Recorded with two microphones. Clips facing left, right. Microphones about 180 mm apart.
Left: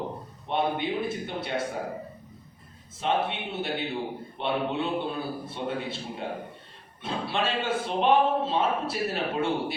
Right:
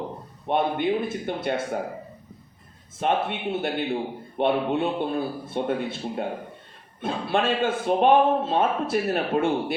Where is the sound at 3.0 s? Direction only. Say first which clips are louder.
Right 3 dB; 50° right (ahead or behind).